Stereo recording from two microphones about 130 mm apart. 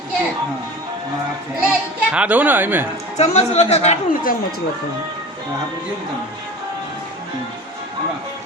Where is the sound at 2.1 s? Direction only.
10° right (ahead or behind).